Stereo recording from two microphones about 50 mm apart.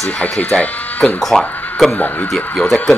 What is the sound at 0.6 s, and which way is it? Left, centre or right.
Speech, left.